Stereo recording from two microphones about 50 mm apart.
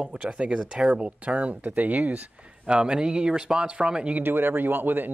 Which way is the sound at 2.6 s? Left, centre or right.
Centre.